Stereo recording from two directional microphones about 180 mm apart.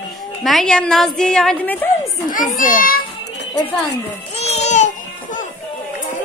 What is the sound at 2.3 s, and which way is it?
Speech, 50° left (ahead or behind).